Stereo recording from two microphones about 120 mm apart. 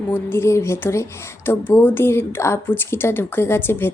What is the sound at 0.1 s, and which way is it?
Speech, 20° left (ahead or behind).